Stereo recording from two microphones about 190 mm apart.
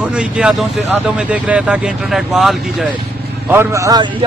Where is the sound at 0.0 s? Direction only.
5° right (ahead or behind).